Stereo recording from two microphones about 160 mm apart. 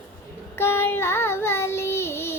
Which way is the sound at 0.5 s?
15° left (ahead or behind).